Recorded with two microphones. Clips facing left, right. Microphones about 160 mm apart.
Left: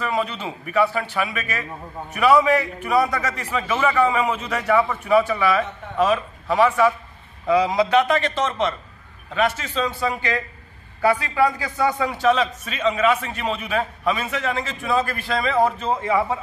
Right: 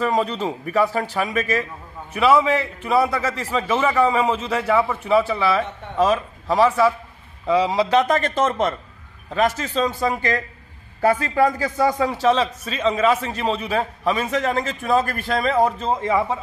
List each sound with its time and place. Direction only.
0.0 s a man's voice: 35° right (ahead or behind)
2.1 s a man's voice: 25° right (ahead or behind); by 15.5 s 45° right (ahead or behind)
15.8 s a man's voice: 35° right (ahead or behind)